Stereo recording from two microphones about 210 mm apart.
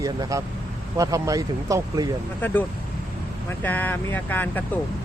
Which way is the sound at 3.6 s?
10° left (ahead or behind).